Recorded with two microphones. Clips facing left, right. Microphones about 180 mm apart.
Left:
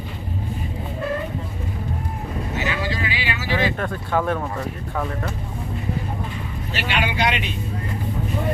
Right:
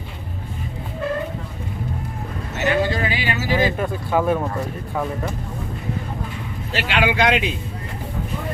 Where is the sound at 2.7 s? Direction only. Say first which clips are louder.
Right 11 dB; 50° right (ahead or behind).